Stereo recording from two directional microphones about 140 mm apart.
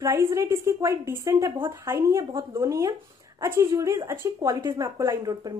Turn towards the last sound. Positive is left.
turn(degrees=-25)  # may be behind; listen again after turning